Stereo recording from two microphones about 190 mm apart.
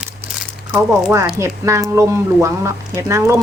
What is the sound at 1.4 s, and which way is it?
Speech, 15° right (ahead or behind).